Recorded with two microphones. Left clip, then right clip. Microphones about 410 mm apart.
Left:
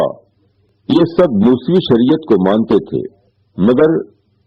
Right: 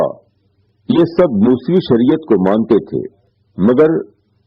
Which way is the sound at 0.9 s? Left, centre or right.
Left.